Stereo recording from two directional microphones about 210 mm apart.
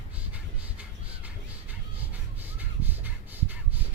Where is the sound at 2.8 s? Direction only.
10° right (ahead or behind).